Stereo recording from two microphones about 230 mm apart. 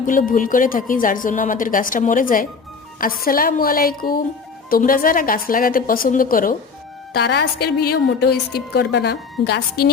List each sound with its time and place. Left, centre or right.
0.0 s a woman's voice: left